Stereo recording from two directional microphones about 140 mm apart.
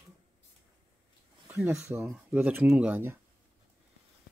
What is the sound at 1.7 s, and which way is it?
Speech, 20° right (ahead or behind).